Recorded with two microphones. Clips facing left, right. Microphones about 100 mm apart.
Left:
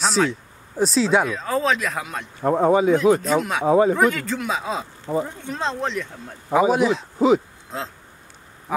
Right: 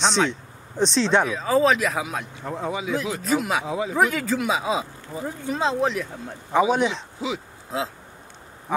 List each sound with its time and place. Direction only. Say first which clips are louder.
0.0 s speech: left 1 dB; 5° left (ahead or behind)
2.4 s speech: left 13 dB; 50° left (ahead or behind)
3.2 s speech: left 2 dB; centre (ahead or behind)
3.6 s speech: left 11 dB; 45° left (ahead or behind)
3.9 s speech: left 2 dB; centre (ahead or behind)
7.2 s speech: left 12 dB; 45° left (ahead or behind)
7.7 s speech: right 3 dB; 5° right (ahead or behind)